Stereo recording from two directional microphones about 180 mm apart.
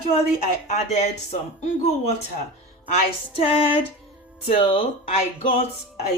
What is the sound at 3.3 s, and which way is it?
Speech, 30° left (ahead or behind).